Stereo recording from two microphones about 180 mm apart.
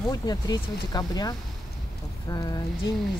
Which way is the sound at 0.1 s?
20° left (ahead or behind).